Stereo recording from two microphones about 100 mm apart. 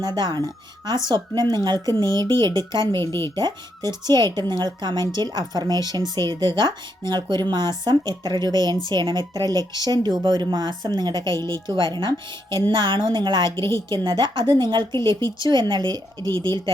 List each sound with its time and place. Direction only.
0.0 s a woman's voice: 45° right (ahead or behind)
3.0 s speech: 25° left (ahead or behind)
3.3 s a woman's voice: 45° right (ahead or behind)